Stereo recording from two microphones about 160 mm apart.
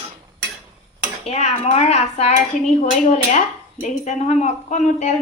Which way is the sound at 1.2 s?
40° left (ahead or behind).